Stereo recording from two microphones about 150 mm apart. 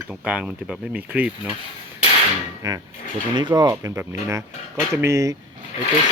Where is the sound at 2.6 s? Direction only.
25° right (ahead or behind).